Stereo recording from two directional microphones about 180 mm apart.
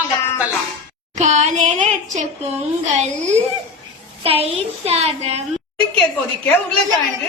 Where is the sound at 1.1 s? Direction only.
40° right (ahead or behind).